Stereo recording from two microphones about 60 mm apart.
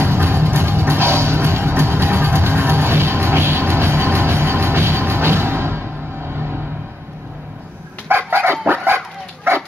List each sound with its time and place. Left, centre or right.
0.0 s music: right
8.1 s dog: right